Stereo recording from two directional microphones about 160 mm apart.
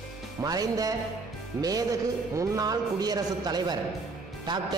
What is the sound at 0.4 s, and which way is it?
Music, 25° right (ahead or behind).